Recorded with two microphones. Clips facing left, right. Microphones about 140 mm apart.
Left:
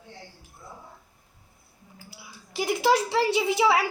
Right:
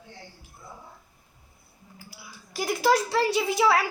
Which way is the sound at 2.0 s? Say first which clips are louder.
Even; 20° left (ahead or behind).